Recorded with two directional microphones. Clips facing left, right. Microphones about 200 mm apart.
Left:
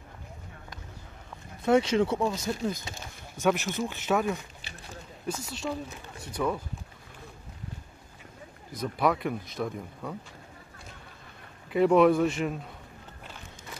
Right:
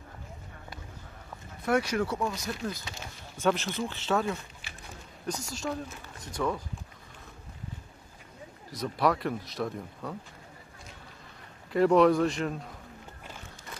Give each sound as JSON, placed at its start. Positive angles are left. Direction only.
{"t": 1.7, "sound": "speech", "side_deg": 25}
{"t": 5.4, "sound": "speech", "side_deg": 0}
{"t": 8.7, "sound": "speech", "side_deg": 0}
{"t": 11.7, "sound": "speech", "side_deg": 5}